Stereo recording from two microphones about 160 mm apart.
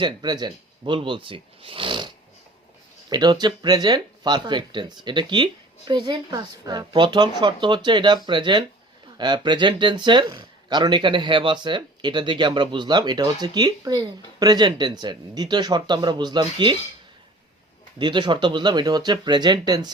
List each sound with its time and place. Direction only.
0.0 s speech: 25° right (ahead or behind)
3.1 s speech: 25° right (ahead or behind)
18.0 s speech: 30° right (ahead or behind)